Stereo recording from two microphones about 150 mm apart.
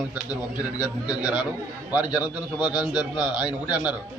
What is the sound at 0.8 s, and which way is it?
A man's voice, 10° right (ahead or behind).